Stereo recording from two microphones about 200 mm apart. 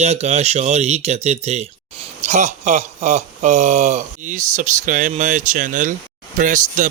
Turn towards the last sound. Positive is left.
turn(degrees=-40)  # may be behind; listen again after turning